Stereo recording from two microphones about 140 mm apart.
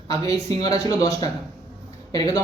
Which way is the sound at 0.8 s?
25° left (ahead or behind).